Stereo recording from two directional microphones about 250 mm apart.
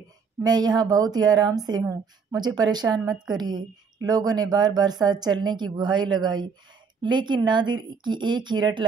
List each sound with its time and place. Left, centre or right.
0.4 s speech: centre